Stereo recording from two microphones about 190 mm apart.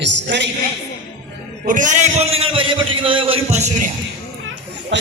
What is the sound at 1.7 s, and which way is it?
A man's voice, 40° right (ahead or behind).